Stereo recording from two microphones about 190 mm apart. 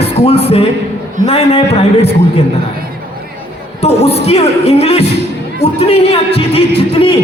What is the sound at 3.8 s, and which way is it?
A man's voice, 35° left (ahead or behind).